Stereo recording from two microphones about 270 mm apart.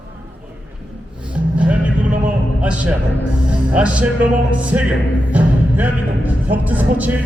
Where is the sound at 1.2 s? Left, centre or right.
Centre.